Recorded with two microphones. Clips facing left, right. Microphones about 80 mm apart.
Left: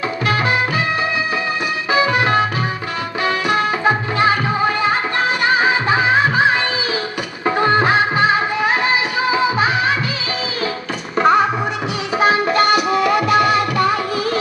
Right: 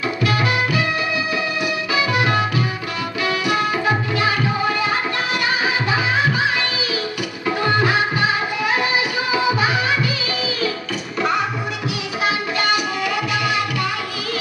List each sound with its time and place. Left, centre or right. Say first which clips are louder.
0.3 s music: left 3 dB; left
1.9 s music: left 5 dB; left
11.2 s music: left 7 dB; left